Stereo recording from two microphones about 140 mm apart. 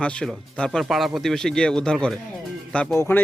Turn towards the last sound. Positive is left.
turn(degrees=15)  # may be behind; listen again after turning